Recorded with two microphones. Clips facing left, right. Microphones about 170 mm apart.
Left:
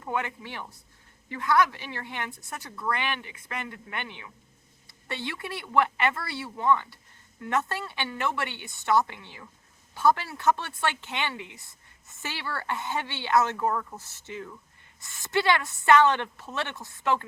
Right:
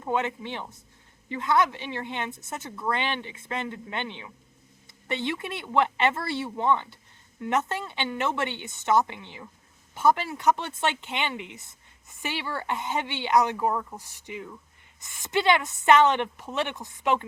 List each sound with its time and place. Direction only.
0.0 s a woman's voice: 20° right (ahead or behind)